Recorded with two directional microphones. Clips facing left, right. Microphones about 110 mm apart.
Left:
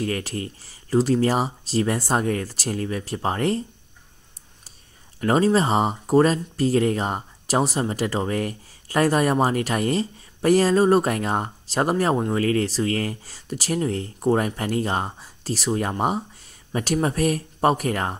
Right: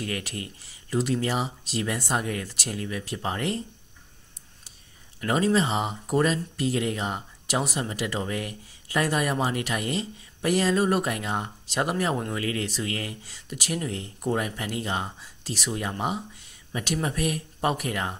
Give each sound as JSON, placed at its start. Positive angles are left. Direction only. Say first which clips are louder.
{"t": 0.0, "sound": "speech", "louder": "left 6 dB", "side_deg": 35}
{"t": 5.2, "sound": "speech", "louder": "left 4 dB", "side_deg": 35}